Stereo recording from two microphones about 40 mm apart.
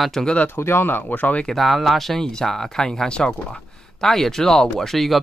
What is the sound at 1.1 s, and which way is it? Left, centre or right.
Speech, left.